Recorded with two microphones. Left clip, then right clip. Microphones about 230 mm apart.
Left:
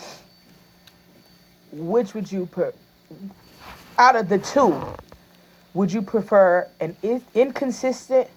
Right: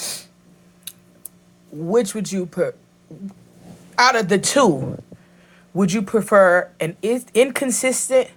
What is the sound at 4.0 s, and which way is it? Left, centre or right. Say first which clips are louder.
Speech: even; right.